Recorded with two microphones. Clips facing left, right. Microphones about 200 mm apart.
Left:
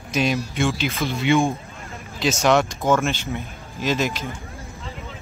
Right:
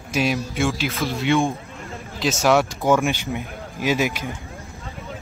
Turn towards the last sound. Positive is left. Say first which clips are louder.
# right 1 dB
turn(degrees=-15)  # may be behind; listen again after turning